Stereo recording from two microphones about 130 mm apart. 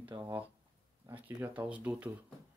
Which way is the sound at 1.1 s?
15° right (ahead or behind).